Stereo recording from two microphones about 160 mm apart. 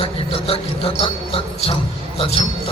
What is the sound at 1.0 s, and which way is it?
Jingle bell, 35° left (ahead or behind).